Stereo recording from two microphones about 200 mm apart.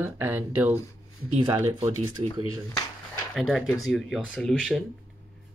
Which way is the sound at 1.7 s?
20° right (ahead or behind).